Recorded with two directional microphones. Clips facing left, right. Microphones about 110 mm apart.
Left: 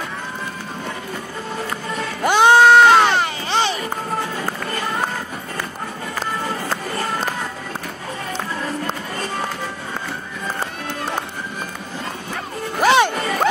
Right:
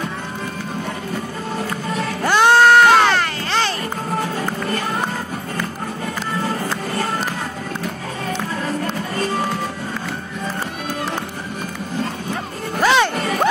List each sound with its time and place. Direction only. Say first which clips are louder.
2.2 s music: left 1 dB; 15° left (ahead or behind)
12.8 s music: left 1 dB; 15° left (ahead or behind)